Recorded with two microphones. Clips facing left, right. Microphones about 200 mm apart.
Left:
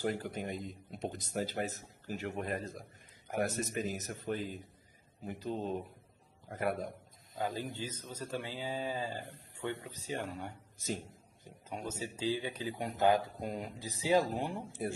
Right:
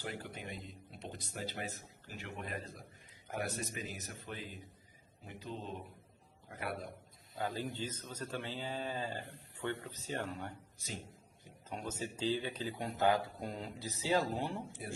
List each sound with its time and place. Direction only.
0.0 s speech: 45° left (ahead or behind)
7.3 s speech: 15° left (ahead or behind)
10.8 s speech: 45° left (ahead or behind)
11.7 s speech: 10° left (ahead or behind)
14.8 s speech: 50° left (ahead or behind)